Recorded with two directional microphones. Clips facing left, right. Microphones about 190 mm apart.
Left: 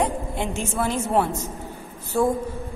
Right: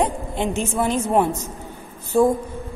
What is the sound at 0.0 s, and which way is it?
A woman's voice, 20° right (ahead or behind).